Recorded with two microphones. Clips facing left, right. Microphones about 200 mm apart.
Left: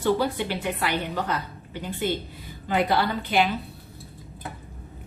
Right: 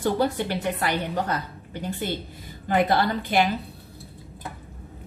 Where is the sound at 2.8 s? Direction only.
45° right (ahead or behind).